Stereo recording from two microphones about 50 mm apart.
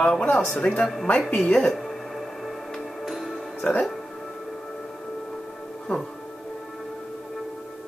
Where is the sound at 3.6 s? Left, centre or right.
Left.